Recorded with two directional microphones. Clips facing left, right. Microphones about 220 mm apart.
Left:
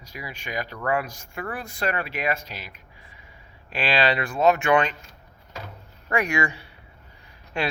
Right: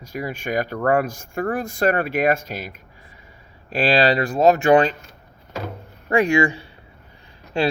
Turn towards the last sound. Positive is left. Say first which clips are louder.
# right 7 dB
turn(degrees=-30)  # may be behind; listen again after turning